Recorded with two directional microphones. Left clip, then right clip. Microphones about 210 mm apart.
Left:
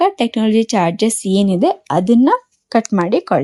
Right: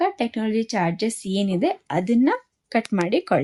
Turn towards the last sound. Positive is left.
turn(degrees=10)  # may be behind; listen again after turning